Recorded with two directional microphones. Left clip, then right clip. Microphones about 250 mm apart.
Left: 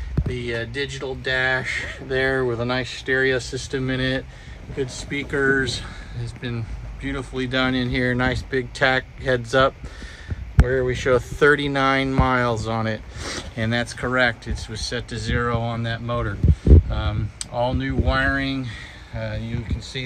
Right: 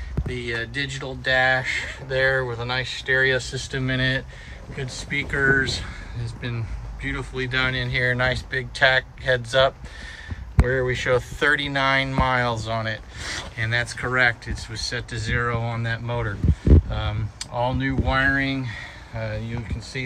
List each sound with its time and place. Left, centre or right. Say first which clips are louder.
0.3 s speech: even; left
10.7 s speech: left 2 dB; centre